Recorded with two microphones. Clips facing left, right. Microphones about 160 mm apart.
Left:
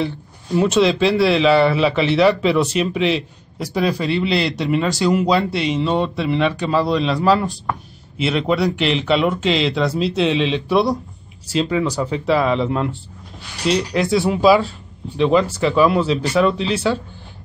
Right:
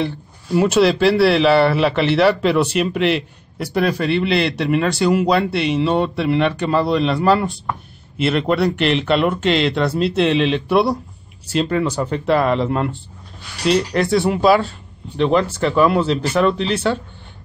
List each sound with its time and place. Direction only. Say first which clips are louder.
0.6 s speech: right 1 dB; 5° right (ahead or behind)
4.2 s speech: right 1 dB; 55° right (ahead or behind)
5.0 s speech: even; centre (ahead or behind)